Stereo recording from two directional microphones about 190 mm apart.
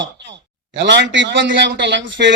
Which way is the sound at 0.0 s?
70° right (ahead or behind).